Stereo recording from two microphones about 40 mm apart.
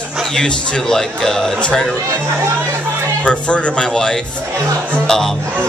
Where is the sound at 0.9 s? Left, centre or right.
Centre.